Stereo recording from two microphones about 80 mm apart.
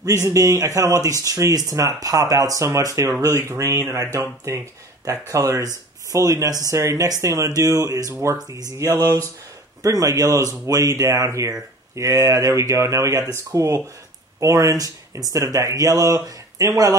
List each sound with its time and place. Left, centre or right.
0.0 s speech: right